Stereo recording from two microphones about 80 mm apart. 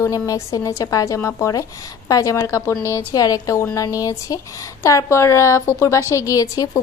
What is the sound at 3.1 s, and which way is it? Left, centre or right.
A woman's voice, left.